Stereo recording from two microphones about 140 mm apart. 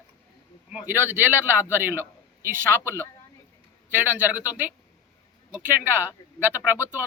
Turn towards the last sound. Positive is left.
turn(degrees=-15)  # may be behind; listen again after turning